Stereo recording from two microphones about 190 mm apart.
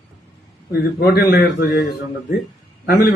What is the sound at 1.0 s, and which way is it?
Speech, 55° left (ahead or behind).